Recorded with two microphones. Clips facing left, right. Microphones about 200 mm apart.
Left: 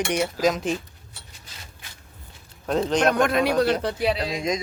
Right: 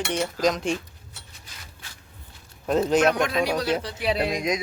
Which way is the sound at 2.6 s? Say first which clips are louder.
Right 1 dB; 5° right (ahead or behind).